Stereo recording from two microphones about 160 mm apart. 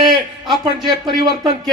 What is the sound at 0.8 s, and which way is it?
Speech, 30° right (ahead or behind).